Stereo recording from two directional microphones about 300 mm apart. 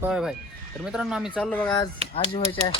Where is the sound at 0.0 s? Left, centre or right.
Centre.